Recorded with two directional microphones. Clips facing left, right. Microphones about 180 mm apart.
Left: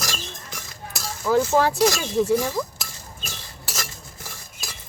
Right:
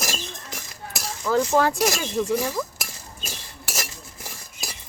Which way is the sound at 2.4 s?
5° right (ahead or behind).